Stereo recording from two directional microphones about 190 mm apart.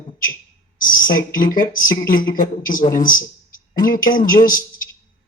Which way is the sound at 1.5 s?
45° left (ahead or behind).